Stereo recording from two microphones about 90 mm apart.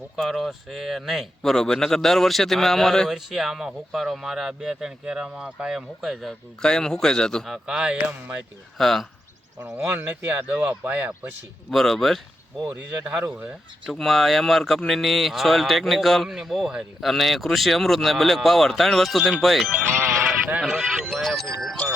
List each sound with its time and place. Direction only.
0.2 s speech: centre (ahead or behind)
6.6 s speech: 5° left (ahead or behind)
7.4 s a man's voice: 5° right (ahead or behind)
8.8 s speech: 5° left (ahead or behind)
9.6 s speech: 20° right (ahead or behind)
11.7 s speech: 5° left (ahead or behind)
12.6 s a man's voice: 20° right (ahead or behind)
13.9 s speech: centre (ahead or behind)